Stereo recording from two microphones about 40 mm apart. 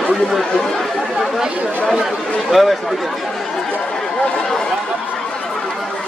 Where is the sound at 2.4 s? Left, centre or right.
Centre.